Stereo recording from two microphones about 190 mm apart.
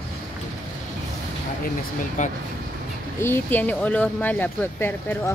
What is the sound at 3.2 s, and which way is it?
Speech, 10° left (ahead or behind).